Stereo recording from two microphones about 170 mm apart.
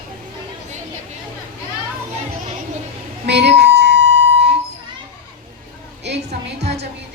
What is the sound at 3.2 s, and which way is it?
Music, 75° right (ahead or behind).